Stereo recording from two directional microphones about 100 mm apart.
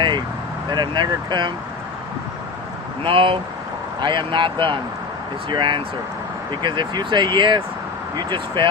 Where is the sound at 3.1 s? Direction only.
60° right (ahead or behind).